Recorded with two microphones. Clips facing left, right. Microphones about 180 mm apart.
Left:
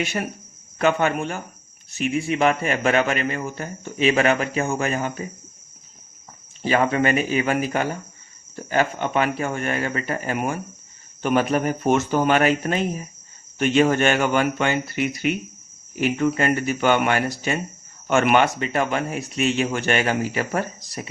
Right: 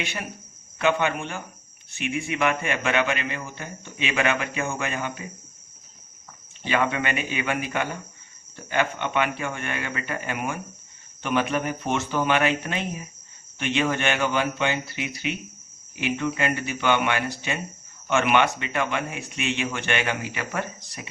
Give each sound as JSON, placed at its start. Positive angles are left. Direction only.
{"t": 0.0, "sound": "speech", "side_deg": 40}
{"t": 6.6, "sound": "speech", "side_deg": 40}